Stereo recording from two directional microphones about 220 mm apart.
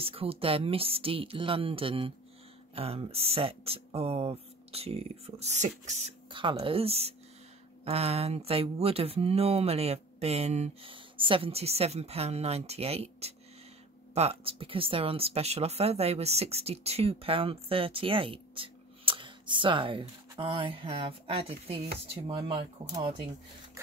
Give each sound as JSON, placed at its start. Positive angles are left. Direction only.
{"t": 0.0, "sound": "speech", "side_deg": -25}